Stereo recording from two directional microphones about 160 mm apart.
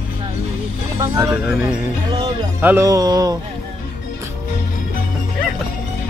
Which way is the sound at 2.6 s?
20° right (ahead or behind).